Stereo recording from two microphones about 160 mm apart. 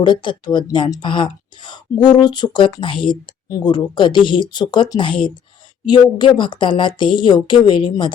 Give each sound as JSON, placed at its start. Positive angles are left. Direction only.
{"t": 0.0, "sound": "speech", "side_deg": 30}